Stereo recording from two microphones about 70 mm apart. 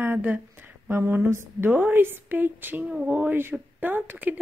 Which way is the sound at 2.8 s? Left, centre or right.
Centre.